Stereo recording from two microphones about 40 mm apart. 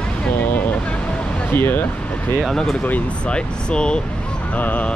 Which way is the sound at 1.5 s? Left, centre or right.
Left.